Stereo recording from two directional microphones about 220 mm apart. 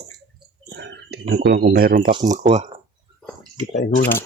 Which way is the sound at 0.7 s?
50° right (ahead or behind).